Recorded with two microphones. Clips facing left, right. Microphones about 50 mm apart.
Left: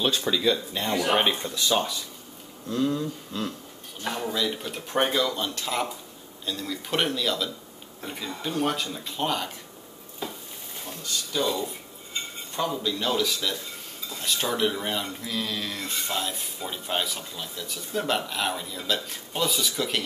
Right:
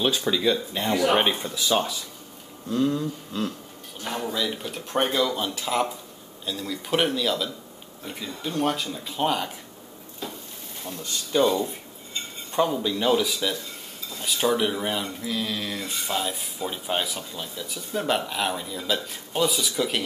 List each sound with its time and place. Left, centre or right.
0.0 s speech: centre
11.3 s speech: right
12.5 s speech: centre